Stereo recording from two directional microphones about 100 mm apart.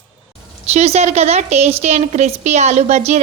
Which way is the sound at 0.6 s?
90° right.